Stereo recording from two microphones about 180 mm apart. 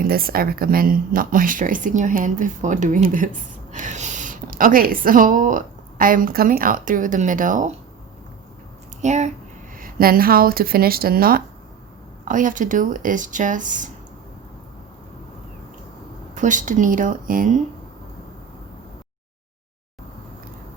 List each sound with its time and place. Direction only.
0.0 s a woman's voice: 55° right (ahead or behind)
9.0 s speech: 40° right (ahead or behind)
9.7 s speech: 55° right (ahead or behind)
16.3 s speech: 45° right (ahead or behind)